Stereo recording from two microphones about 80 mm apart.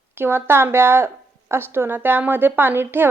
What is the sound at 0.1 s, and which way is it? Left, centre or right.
Speech, right.